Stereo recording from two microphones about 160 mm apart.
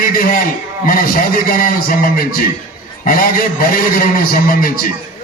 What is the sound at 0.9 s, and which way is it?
A man's voice, 65° left (ahead or behind).